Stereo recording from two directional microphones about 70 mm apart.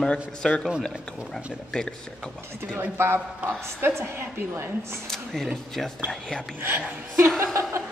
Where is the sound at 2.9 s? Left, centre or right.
Right.